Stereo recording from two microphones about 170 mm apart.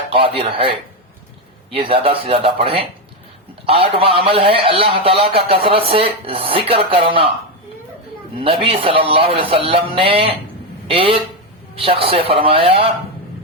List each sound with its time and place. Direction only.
0.1 s a man's voice: 30° right (ahead or behind)
1.7 s a man's voice: 30° right (ahead or behind)
8.4 s a man's voice: 35° right (ahead or behind)